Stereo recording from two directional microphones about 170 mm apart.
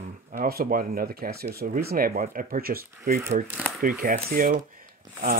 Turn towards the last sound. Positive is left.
turn(degrees=-55)  # may be behind; listen again after turning